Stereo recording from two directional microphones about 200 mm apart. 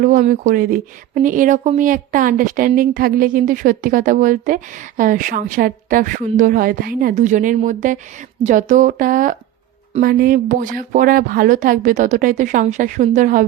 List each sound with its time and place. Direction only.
0.0 s speech: 40° right (ahead or behind)